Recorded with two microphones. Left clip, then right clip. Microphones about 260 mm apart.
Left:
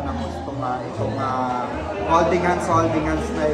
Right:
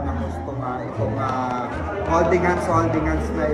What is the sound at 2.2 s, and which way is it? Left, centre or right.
Speech, left.